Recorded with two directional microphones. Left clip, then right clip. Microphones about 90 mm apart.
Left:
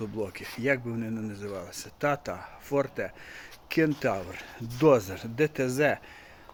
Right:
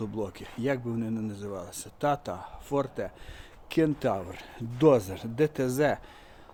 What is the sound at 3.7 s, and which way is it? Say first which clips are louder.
Speech: even; 30° right (ahead or behind).